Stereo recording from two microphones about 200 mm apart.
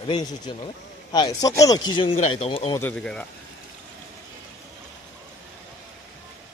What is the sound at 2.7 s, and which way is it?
Speech, 5° left (ahead or behind).